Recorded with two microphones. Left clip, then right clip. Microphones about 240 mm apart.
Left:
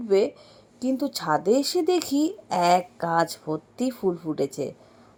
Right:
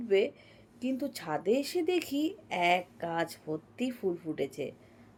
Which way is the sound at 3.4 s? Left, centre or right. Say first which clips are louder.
Left 7 dB; left.